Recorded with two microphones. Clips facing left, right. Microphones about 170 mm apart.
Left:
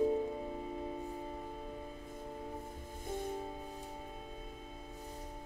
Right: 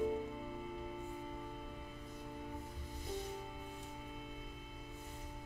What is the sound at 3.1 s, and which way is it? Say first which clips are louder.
Music: left 3 dB; 50° left (ahead or behind).